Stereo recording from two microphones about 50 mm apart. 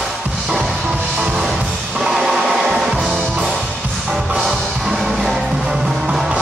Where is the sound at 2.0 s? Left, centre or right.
Centre.